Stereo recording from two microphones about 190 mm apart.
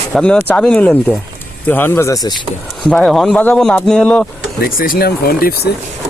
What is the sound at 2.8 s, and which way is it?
Speech, 5° left (ahead or behind).